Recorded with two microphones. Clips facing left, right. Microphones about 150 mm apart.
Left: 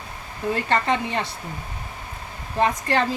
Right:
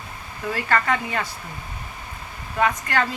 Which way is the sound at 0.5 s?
25° left (ahead or behind).